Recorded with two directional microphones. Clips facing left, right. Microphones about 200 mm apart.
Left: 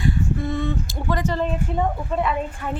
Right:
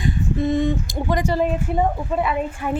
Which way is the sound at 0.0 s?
20° right (ahead or behind).